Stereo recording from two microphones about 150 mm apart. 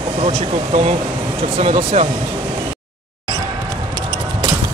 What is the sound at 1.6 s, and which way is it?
Speech, 45° right (ahead or behind).